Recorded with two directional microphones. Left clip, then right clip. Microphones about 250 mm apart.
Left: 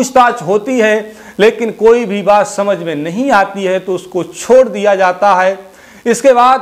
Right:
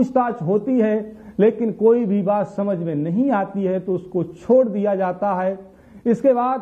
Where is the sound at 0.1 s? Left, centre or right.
Centre.